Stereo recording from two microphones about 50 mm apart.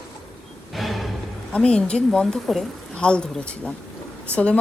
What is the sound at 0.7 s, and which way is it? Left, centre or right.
Music, centre.